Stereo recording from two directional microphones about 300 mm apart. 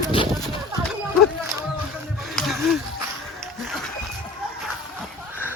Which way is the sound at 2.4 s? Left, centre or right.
Centre.